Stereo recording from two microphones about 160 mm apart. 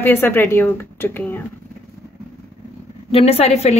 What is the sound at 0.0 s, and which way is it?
A woman's voice, 15° left (ahead or behind).